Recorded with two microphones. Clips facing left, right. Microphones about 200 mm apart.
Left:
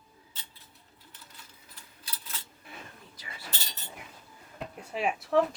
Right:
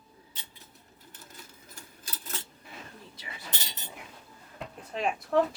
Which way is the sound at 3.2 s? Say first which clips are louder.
Even; 15° right (ahead or behind).